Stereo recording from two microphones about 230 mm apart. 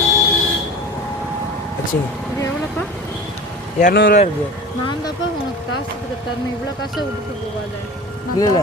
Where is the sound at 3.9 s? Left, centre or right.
Left.